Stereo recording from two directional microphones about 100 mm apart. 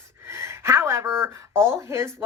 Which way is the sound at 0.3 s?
30° right (ahead or behind).